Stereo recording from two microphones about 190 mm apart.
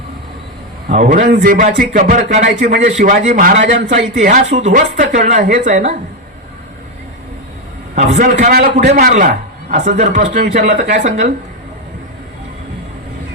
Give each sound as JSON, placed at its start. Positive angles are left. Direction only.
{"t": 0.9, "sound": "a man's voice", "side_deg": -40}
{"t": 3.6, "sound": "a man's voice", "side_deg": -70}
{"t": 3.8, "sound": "speech", "side_deg": -45}
{"t": 7.9, "sound": "speech", "side_deg": -35}
{"t": 8.3, "sound": "a man's voice", "side_deg": -50}
{"t": 10.1, "sound": "speech", "side_deg": -60}
{"t": 10.5, "sound": "speech", "side_deg": -40}